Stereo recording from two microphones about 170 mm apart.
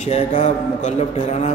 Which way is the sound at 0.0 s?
45° left (ahead or behind).